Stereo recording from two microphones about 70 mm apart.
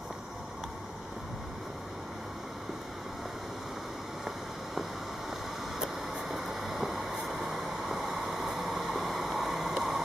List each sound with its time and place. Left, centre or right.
5.8 s train: centre